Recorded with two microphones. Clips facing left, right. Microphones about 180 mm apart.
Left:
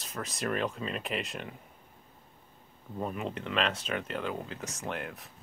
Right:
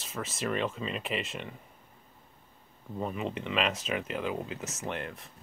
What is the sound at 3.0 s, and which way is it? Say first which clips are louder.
Speech: right 1 dB; centre (ahead or behind).